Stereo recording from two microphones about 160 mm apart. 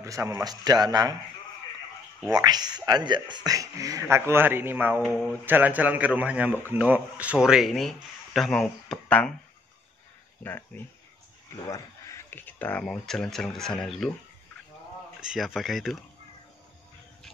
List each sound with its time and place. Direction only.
0.0 s a man's voice: 20° right (ahead or behind)
2.2 s a man's voice: 25° right (ahead or behind); by 9.3 s 5° left (ahead or behind)
10.7 s speech: 15° left (ahead or behind)
15.1 s speech: 5° right (ahead or behind)